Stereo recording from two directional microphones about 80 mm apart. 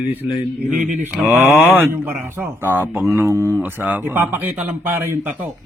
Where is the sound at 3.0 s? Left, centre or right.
Right.